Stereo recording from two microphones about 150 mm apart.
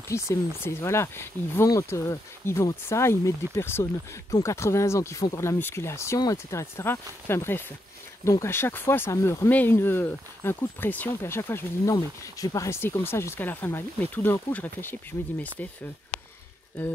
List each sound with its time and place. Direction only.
0.1 s speech: 20° left (ahead or behind)